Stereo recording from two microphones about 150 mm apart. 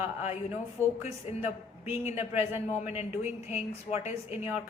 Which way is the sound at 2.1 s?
15° right (ahead or behind).